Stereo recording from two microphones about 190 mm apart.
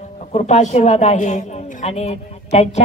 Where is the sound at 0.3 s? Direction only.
35° left (ahead or behind).